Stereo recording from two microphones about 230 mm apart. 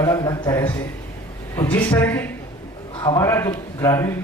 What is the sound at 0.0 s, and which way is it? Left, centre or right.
Speech, centre.